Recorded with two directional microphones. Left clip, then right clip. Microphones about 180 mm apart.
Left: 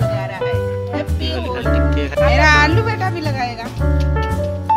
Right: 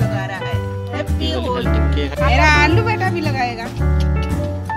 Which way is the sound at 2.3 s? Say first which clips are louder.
Even; 15° left (ahead or behind).